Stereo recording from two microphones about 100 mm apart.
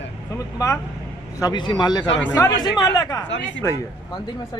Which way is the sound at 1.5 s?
50° left (ahead or behind).